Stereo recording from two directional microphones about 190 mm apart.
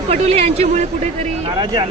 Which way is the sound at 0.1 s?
35° right (ahead or behind).